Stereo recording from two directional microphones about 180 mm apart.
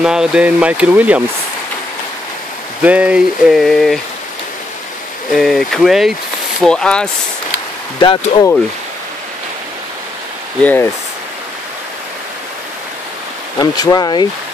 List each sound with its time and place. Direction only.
0.0 s speech: 5° right (ahead or behind)
2.8 s speech: 5° right (ahead or behind)
5.3 s speech: centre (ahead or behind)
8.0 s speech: 30° left (ahead or behind)
10.6 s speech: 10° left (ahead or behind)
13.6 s speech: 20° left (ahead or behind)